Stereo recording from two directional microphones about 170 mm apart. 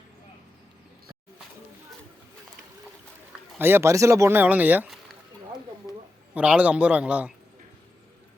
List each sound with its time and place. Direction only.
3.6 s speech: 15° right (ahead or behind)
6.3 s speech: 10° right (ahead or behind)